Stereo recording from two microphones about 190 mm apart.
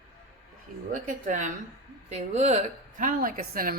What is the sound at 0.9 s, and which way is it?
Speech, 40° right (ahead or behind).